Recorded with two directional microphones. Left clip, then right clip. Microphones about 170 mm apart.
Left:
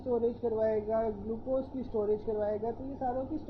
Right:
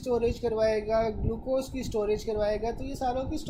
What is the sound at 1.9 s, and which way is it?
Speech, 30° right (ahead or behind).